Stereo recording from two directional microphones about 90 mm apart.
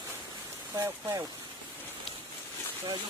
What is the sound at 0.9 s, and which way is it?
Speech, 35° right (ahead or behind).